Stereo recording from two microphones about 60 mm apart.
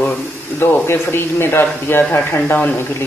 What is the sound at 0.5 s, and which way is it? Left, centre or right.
Speech, left.